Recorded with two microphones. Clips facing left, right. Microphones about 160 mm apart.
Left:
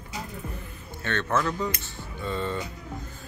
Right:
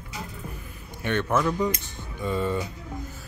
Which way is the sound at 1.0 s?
15° right (ahead or behind).